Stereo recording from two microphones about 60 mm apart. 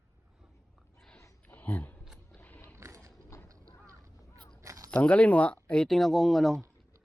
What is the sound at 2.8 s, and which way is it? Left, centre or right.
Mechanisms, right.